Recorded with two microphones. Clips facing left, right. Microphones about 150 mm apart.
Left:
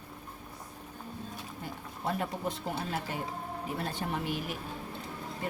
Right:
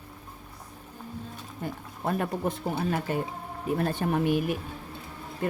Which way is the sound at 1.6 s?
50° right (ahead or behind).